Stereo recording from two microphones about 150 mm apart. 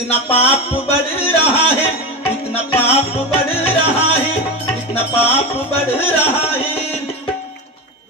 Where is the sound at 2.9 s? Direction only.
40° left (ahead or behind).